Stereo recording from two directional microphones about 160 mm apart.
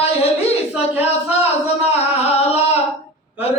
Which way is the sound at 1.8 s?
40° left (ahead or behind).